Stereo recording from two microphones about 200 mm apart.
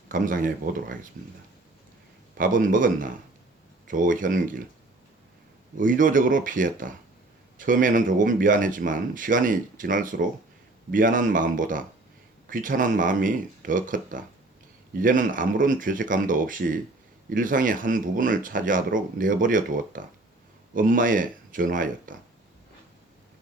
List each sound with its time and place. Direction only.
0.1 s speech: 40° right (ahead or behind)
2.4 s speech: 40° right (ahead or behind)
5.7 s speech: 40° right (ahead or behind)